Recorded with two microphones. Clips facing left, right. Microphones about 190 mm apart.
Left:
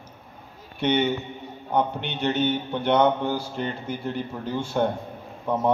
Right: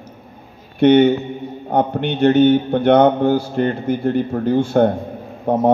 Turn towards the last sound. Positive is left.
turn(degrees=-50)  # may be behind; listen again after turning